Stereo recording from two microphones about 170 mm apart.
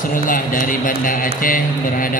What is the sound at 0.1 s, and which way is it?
A man's voice, 55° left (ahead or behind).